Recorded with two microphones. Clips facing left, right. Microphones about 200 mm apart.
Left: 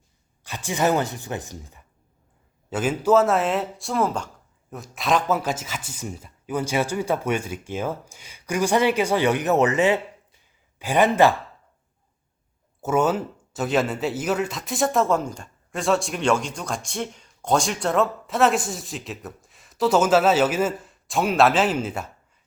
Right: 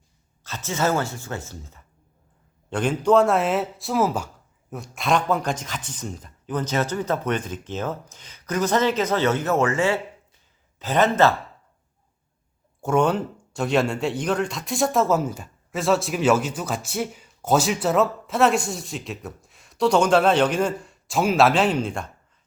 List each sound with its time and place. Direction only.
0.4 s speech: 15° left (ahead or behind)
12.8 s speech: 5° left (ahead or behind)